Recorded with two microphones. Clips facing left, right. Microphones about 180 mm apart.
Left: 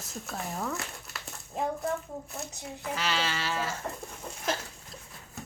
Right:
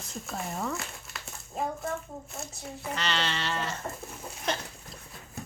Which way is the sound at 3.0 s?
5° left (ahead or behind).